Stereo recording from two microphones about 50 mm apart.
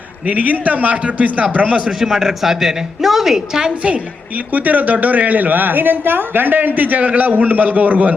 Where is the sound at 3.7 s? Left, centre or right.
Right.